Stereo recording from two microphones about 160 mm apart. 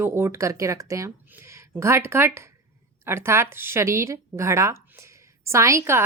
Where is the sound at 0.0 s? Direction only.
15° right (ahead or behind).